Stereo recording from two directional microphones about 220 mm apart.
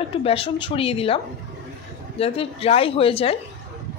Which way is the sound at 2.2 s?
25° left (ahead or behind).